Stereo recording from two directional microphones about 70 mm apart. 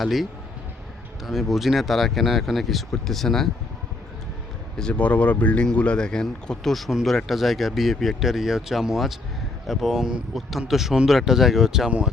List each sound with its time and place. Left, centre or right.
0.0 s speech: centre
4.8 s speech: centre
11.9 s speech: centre